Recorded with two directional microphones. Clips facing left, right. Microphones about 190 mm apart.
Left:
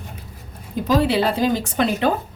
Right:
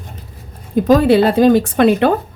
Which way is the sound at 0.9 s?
50° right (ahead or behind).